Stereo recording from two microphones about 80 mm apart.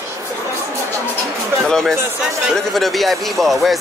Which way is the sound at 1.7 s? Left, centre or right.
Centre.